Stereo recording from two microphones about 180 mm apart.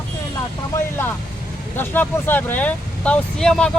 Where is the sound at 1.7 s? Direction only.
10° left (ahead or behind).